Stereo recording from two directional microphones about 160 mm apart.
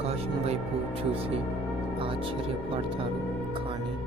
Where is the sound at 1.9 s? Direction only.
35° right (ahead or behind).